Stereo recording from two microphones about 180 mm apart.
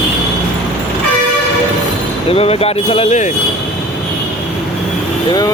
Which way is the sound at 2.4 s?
35° left (ahead or behind).